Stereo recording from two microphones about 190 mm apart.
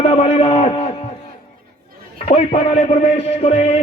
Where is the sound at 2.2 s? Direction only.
30° left (ahead or behind).